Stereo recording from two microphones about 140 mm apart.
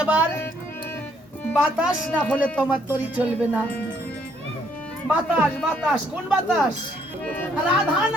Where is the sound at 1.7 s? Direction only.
10° right (ahead or behind).